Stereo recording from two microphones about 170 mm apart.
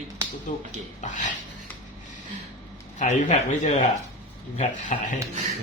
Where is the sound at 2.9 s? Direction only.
45° left (ahead or behind).